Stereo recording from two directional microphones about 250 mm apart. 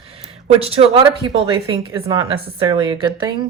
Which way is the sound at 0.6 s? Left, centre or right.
Right.